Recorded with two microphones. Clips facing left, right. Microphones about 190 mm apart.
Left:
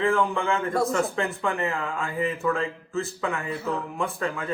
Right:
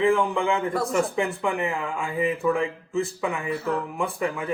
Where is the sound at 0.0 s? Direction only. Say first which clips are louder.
Right 2 dB; 15° right (ahead or behind).